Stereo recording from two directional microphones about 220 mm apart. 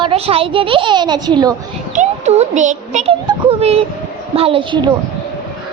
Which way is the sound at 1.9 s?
30° right (ahead or behind).